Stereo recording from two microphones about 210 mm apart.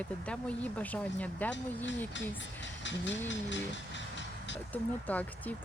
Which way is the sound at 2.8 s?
60° left (ahead or behind).